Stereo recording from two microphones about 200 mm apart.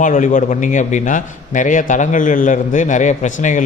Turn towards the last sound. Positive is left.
turn(degrees=40)  # may be behind; listen again after turning